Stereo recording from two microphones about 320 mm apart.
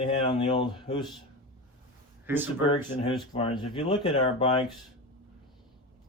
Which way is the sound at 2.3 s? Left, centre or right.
Centre.